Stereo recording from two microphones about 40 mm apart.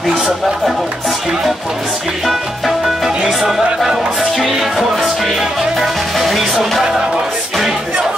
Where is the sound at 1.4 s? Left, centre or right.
Centre.